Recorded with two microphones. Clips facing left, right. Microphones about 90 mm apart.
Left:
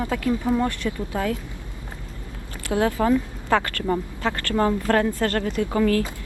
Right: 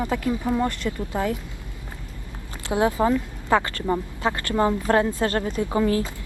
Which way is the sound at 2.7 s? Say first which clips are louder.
Even; 20° right (ahead or behind).